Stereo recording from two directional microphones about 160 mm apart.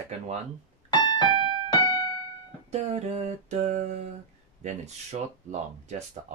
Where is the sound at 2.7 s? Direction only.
40° right (ahead or behind).